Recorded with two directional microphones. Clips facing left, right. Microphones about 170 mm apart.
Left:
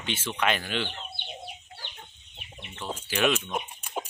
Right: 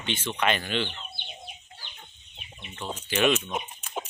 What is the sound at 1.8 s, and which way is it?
Chicken, 70° left (ahead or behind).